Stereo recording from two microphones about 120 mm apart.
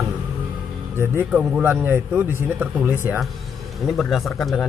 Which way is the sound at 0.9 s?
20° right (ahead or behind).